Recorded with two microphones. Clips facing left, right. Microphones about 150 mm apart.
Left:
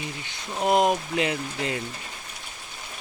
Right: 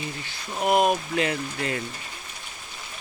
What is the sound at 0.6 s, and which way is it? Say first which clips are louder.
Speech: even; 20° left (ahead or behind).